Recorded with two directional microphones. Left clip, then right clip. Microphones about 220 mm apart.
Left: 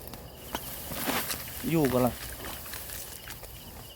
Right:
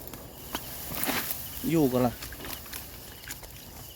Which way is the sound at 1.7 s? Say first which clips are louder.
Right 1 dB; 10° right (ahead or behind).